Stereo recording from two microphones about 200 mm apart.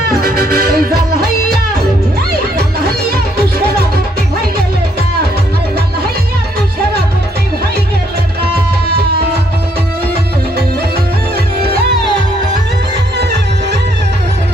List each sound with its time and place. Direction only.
0.2 s music: 50° right (ahead or behind)